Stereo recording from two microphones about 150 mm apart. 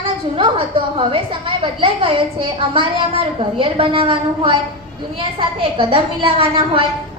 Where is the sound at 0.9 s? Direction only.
35° right (ahead or behind).